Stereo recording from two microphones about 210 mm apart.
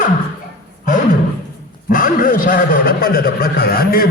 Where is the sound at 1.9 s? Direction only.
40° left (ahead or behind).